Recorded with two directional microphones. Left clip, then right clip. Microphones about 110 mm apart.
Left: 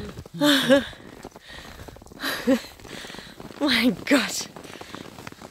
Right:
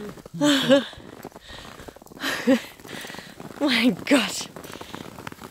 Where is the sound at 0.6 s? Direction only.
20° left (ahead or behind).